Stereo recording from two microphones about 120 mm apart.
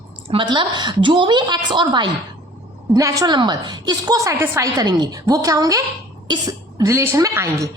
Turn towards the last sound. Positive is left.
turn(degrees=-25)  # may be behind; listen again after turning